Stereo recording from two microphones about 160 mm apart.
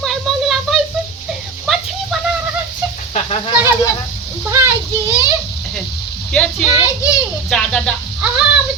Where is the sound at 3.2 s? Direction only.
40° left (ahead or behind).